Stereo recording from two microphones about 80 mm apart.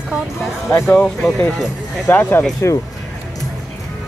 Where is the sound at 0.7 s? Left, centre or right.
Left.